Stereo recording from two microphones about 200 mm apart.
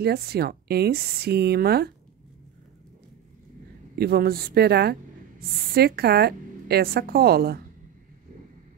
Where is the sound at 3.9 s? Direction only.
50° right (ahead or behind).